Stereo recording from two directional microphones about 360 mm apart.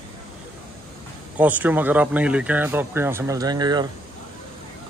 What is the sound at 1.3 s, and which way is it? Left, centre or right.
Speech, centre.